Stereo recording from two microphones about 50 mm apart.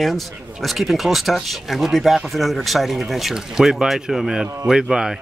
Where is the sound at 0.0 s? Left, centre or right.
Centre.